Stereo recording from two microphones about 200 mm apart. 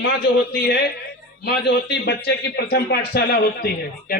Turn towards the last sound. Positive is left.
turn(degrees=50)  # may be behind; listen again after turning